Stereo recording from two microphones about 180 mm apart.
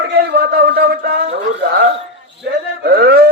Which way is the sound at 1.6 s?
70° right (ahead or behind).